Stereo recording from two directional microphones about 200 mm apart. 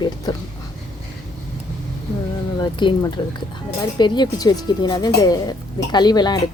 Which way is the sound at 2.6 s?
20° left (ahead or behind).